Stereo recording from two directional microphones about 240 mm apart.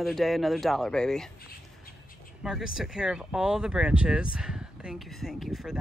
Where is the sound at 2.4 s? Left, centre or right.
Centre.